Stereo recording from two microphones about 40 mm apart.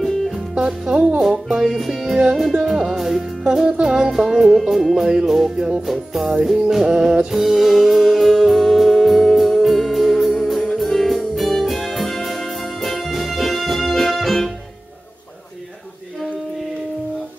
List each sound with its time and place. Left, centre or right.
0.6 s speech: right
1.2 s music: centre
5.0 s music: centre
7.2 s music: centre